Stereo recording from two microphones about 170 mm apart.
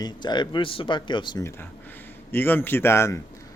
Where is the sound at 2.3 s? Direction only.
10° left (ahead or behind).